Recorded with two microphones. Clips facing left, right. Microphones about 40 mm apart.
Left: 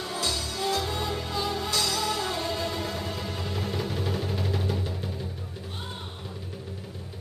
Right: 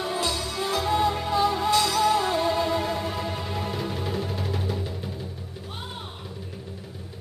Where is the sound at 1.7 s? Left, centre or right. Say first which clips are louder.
Right 7 dB; right; by 5.2 s centre.